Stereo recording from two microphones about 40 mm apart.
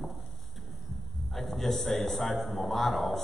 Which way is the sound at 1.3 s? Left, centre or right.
Centre.